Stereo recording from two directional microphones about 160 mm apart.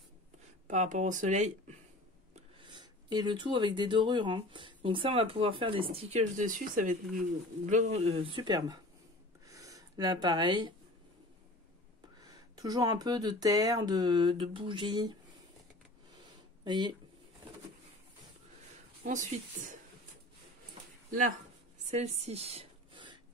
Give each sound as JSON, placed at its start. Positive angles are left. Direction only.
{"t": 0.7, "sound": "speech", "side_deg": -50}
{"t": 2.6, "sound": "speech", "side_deg": -30}
{"t": 9.5, "sound": "a sound", "side_deg": -20}
{"t": 12.3, "sound": "speech", "side_deg": -25}
{"t": 16.6, "sound": "speech", "side_deg": -30}
{"t": 19.0, "sound": "speech", "side_deg": -50}
{"t": 21.9, "sound": "a sound", "side_deg": -45}